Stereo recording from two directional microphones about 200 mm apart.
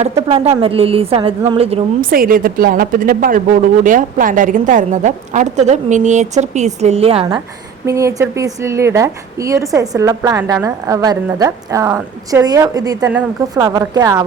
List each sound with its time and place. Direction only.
0.0 s a woman's voice: 30° right (ahead or behind)
2.0 s a woman's voice: 45° right (ahead or behind); by 7.3 s 30° right (ahead or behind)
7.9 s a woman's voice: 15° right (ahead or behind)
13.1 s a woman's voice: 10° right (ahead or behind)